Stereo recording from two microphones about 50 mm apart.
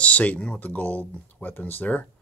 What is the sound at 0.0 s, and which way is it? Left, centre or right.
Speech, left.